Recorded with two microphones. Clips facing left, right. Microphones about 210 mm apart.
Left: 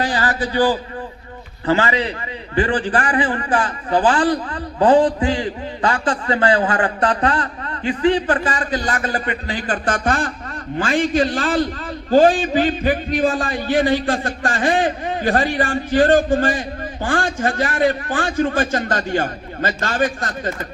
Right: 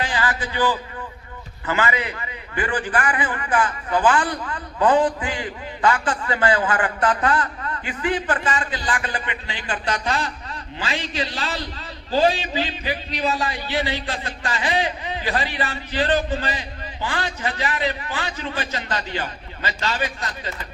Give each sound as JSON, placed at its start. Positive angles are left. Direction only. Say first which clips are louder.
{"t": 0.0, "sound": "a man's voice", "louder": "left 4 dB", "side_deg": 40}